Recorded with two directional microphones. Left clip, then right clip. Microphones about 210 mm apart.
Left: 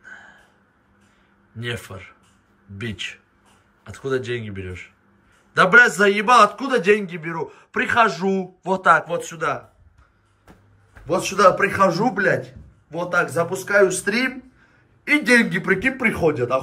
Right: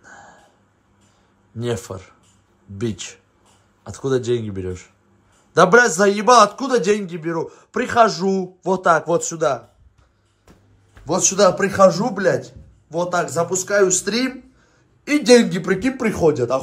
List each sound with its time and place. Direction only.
0.0 s a sound: 15° right (ahead or behind)
1.6 s a man's voice: 15° right (ahead or behind)
11.2 s a man's voice: 5° right (ahead or behind)